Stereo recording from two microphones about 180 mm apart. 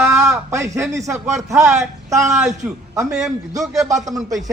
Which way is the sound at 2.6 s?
10° right (ahead or behind).